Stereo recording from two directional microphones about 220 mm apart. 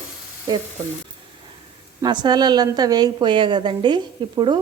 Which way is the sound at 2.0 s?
20° right (ahead or behind).